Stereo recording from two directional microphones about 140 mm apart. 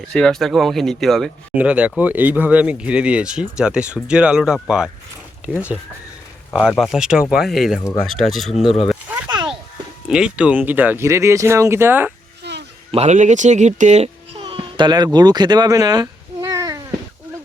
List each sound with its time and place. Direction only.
0.1 s speech: 5° left (ahead or behind)
6.5 s speech: centre (ahead or behind)
8.9 s a sound: 10° right (ahead or behind)
9.3 s a sound: 35° right (ahead or behind)
10.1 s speech: 5° right (ahead or behind)
12.9 s a child's voice: 50° right (ahead or behind); by 16.8 s 25° right (ahead or behind)